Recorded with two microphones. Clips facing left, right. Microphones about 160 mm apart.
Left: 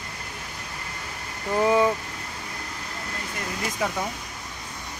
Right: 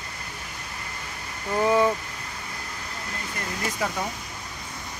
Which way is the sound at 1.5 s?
10° left (ahead or behind).